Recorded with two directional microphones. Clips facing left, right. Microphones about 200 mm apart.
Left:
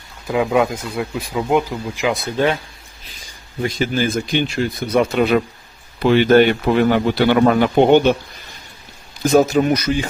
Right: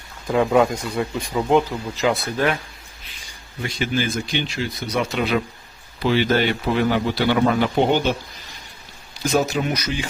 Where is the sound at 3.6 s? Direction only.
40° left (ahead or behind).